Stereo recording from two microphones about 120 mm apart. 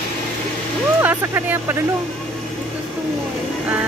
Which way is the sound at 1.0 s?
15° right (ahead or behind).